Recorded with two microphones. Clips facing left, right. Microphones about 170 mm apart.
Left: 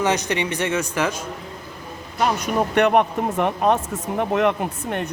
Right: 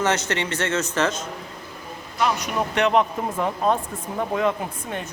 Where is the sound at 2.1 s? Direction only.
45° left (ahead or behind); by 5.0 s 65° left (ahead or behind).